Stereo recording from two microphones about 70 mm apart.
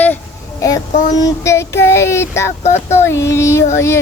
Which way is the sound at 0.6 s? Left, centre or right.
Left.